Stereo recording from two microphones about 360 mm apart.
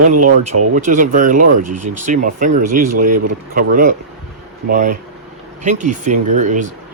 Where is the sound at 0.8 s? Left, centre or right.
Right.